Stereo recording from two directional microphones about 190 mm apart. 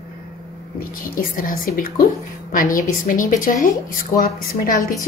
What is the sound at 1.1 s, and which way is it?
A woman's voice, 50° left (ahead or behind).